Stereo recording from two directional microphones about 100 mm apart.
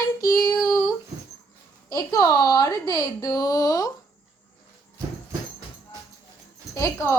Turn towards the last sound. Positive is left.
turn(degrees=30)  # may be behind; listen again after turning